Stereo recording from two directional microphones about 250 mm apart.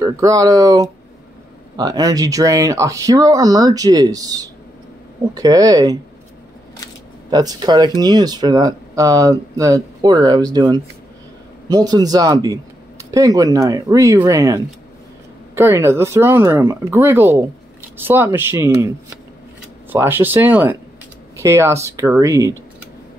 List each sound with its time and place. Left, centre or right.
0.0 s speech: centre
7.2 s speech: centre